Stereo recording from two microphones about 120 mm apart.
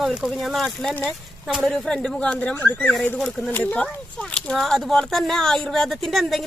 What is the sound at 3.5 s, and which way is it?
Speech, 15° left (ahead or behind).